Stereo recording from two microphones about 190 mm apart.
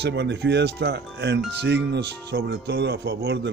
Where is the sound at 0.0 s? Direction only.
65° right (ahead or behind).